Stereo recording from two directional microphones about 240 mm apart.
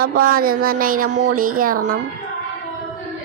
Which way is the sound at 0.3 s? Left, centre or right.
Right.